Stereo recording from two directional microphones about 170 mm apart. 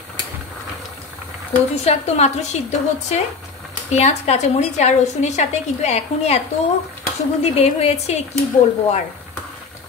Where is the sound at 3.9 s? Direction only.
40° left (ahead or behind).